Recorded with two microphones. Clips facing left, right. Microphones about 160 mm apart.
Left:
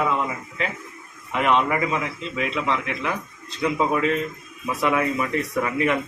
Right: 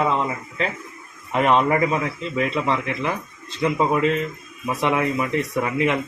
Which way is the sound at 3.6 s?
25° right (ahead or behind).